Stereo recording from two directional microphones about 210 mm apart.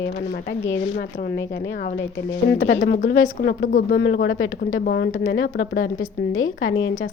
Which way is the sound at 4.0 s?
60° left (ahead or behind).